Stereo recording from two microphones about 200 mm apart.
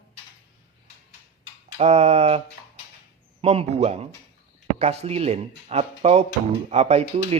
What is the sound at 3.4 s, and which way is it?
Speech, 30° right (ahead or behind).